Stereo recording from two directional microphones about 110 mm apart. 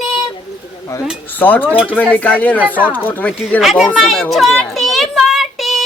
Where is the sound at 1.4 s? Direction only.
15° left (ahead or behind).